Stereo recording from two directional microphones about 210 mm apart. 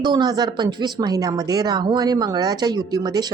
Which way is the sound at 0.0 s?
20° right (ahead or behind).